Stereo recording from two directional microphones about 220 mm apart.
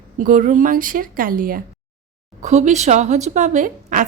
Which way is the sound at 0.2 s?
35° right (ahead or behind).